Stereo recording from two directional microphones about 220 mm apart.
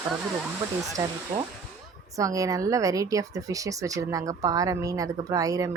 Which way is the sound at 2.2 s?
15° right (ahead or behind).